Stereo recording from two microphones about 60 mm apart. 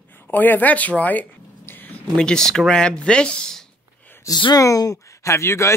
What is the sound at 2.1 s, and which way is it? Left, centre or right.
Speech, centre.